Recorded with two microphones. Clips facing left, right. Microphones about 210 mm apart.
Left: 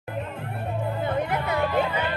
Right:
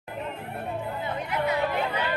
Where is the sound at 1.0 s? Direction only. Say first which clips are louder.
Left 4 dB; 55° left (ahead or behind).